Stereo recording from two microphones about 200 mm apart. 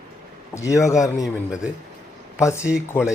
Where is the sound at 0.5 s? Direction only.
15° left (ahead or behind).